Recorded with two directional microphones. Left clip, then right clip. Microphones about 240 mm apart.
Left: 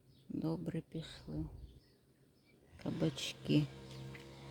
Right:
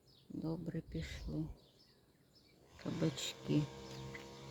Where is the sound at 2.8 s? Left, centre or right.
Centre.